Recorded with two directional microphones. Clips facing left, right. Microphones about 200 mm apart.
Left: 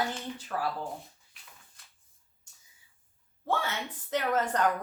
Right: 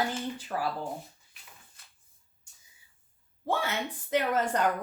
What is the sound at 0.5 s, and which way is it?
Speech, 20° right (ahead or behind).